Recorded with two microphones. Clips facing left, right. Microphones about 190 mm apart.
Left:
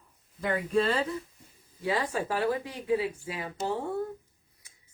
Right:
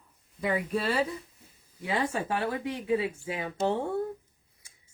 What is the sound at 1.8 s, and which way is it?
Speech, 25° right (ahead or behind).